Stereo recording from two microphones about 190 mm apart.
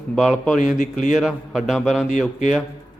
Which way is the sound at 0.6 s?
40° left (ahead or behind).